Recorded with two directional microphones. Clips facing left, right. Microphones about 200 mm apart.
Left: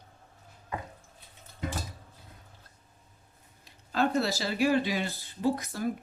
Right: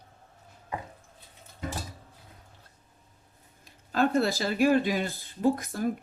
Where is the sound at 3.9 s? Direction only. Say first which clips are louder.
Right 3 dB; 50° right (ahead or behind).